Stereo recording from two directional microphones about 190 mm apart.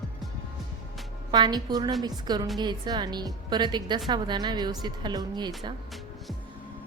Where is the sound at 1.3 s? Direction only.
20° right (ahead or behind).